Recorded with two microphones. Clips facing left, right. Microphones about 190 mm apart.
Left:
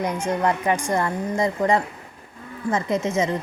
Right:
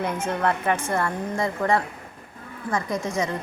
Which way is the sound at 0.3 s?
15° left (ahead or behind).